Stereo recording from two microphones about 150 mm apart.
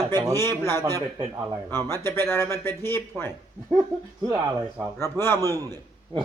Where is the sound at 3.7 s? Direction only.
25° right (ahead or behind).